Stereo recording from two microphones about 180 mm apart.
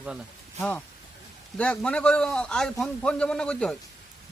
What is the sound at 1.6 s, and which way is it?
A man's voice, 5° left (ahead or behind).